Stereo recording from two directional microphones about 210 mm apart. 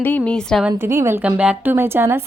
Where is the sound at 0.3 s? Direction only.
5° left (ahead or behind).